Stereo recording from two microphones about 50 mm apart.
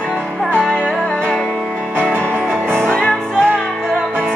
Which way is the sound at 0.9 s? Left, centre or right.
Centre.